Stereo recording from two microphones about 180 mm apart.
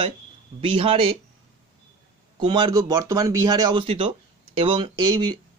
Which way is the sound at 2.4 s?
25° right (ahead or behind).